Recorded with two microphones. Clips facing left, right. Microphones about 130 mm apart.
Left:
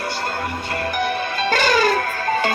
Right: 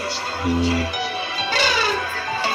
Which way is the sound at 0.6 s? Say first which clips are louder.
Even; 55° left (ahead or behind).